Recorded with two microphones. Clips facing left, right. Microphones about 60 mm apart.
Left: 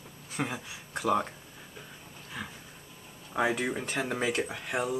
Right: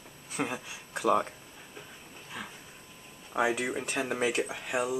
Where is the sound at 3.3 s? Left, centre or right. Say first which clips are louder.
Even; centre.